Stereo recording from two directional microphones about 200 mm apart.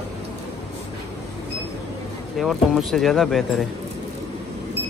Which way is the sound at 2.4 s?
Centre (ahead or behind).